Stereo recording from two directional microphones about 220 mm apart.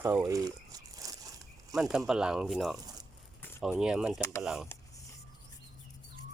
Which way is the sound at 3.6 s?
5° right (ahead or behind).